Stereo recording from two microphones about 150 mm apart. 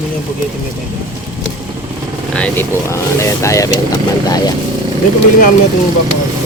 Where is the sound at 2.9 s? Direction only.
20° left (ahead or behind).